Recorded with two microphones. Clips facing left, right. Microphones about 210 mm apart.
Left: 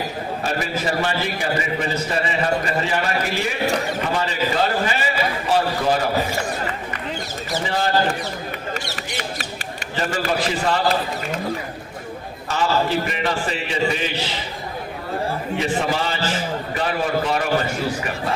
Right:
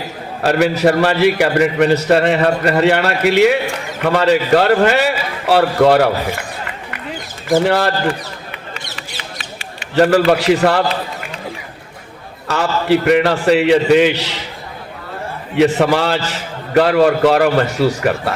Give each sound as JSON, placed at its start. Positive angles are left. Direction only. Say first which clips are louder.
{"t": 0.4, "sound": "a man's voice", "louder": "right 13 dB", "side_deg": -70}
{"t": 7.5, "sound": "a man's voice", "louder": "right 10 dB", "side_deg": -70}
{"t": 8.7, "sound": "a sound", "louder": "left 3 dB", "side_deg": 45}
{"t": 9.9, "sound": "a man's voice", "louder": "right 12 dB", "side_deg": -70}
{"t": 12.5, "sound": "a man's voice", "louder": "right 6 dB", "side_deg": -70}
{"t": 15.5, "sound": "a man's voice", "louder": "right 11 dB", "side_deg": -70}